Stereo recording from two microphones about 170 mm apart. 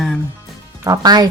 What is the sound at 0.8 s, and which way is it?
Speech, 20° right (ahead or behind).